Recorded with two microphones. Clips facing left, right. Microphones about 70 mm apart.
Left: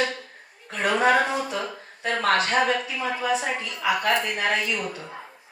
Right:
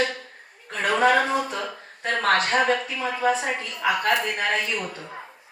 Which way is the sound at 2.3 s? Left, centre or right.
Right.